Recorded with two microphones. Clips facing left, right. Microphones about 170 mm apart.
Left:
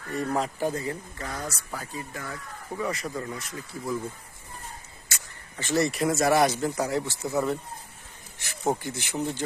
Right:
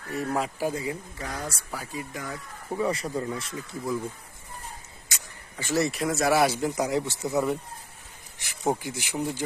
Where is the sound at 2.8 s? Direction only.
30° right (ahead or behind).